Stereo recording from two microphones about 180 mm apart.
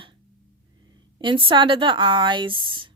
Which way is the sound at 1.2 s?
25° right (ahead or behind).